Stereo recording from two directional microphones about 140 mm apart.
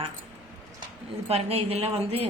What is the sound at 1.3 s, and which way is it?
A woman's voice, 45° right (ahead or behind).